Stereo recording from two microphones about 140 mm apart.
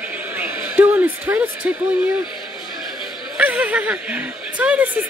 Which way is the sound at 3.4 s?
10° right (ahead or behind).